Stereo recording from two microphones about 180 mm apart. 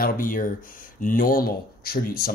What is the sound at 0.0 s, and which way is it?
Speech, 50° left (ahead or behind).